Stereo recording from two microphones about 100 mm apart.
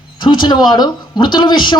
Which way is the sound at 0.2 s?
50° left (ahead or behind).